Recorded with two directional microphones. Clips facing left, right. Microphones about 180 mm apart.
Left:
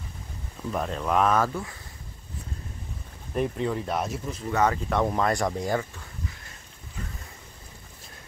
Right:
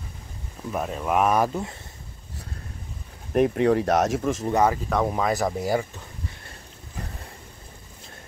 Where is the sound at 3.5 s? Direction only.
65° right (ahead or behind); by 4.5 s 85° right.